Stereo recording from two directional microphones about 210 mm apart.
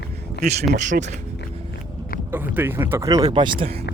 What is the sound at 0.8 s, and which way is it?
Speech, 35° right (ahead or behind).